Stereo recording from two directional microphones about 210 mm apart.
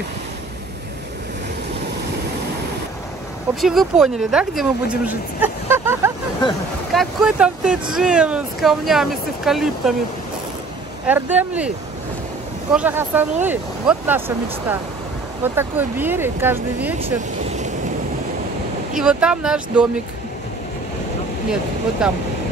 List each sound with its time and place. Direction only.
3.6 s speech: centre (ahead or behind)
6.9 s speech: centre (ahead or behind)
11.1 s speech: 10° right (ahead or behind)
12.7 s speech: 10° right (ahead or behind)
17.0 s speech: 30° right (ahead or behind)
18.9 s speech: 5° right (ahead or behind)
22.0 s speech: 5° right (ahead or behind)